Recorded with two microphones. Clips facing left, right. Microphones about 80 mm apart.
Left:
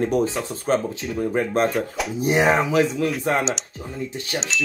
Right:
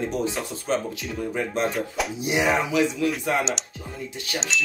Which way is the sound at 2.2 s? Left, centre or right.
Left.